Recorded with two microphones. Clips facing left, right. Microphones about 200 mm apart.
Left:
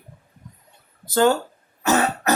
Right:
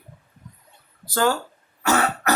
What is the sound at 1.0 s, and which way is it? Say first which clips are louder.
Speech: left 4 dB; 25° left (ahead or behind).